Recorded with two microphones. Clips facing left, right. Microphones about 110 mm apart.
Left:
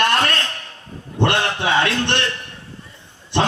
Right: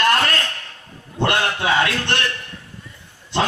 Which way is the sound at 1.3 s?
25° left (ahead or behind).